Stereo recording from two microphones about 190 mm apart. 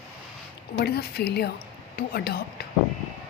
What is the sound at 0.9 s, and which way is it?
A woman's voice, 55° left (ahead or behind).